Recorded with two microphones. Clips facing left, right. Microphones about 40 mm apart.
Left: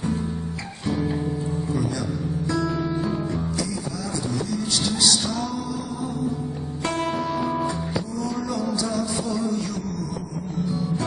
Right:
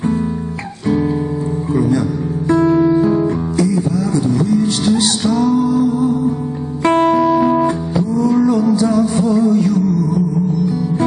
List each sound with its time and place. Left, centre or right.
1.7 s music: right
7.2 s music: right
7.6 s music: right